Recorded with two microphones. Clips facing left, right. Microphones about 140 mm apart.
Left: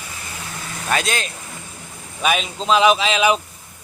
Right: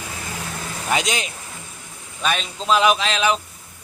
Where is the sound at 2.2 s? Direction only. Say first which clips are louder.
Left 3 dB; 5° left (ahead or behind).